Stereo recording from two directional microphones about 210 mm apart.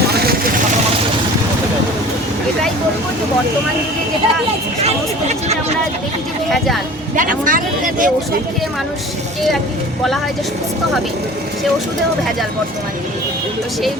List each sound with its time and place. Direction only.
7.2 s speech: 40° right (ahead or behind)